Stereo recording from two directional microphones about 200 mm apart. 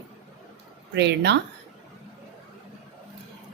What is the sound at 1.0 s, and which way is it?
Speech, 60° right (ahead or behind).